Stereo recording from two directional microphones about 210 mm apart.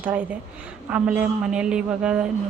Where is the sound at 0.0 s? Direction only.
10° right (ahead or behind).